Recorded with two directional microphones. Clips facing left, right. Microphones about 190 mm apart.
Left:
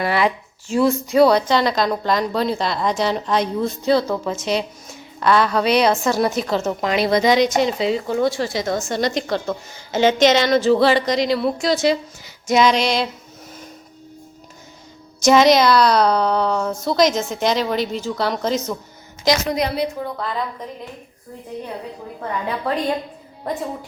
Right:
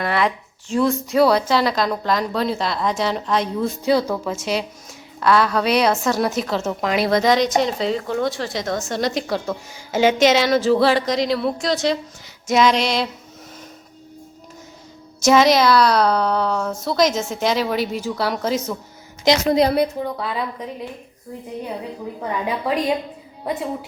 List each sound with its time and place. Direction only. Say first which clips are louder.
0.0 s a woman's voice: left 2 dB; 5° left (ahead or behind)
15.2 s a woman's voice: left 1 dB; centre (ahead or behind)
19.2 s a woman's voice: right 3 dB; 25° right (ahead or behind)
20.1 s a woman's voice: even; 10° right (ahead or behind)
22.2 s a woman's voice: even; 10° right (ahead or behind)